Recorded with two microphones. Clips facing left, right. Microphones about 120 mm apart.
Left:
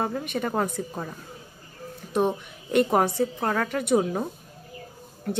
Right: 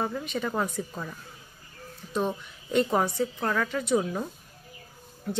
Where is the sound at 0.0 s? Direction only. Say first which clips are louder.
Left 2 dB; 55° left (ahead or behind).